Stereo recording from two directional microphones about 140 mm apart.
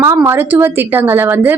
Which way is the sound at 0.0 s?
20° right (ahead or behind).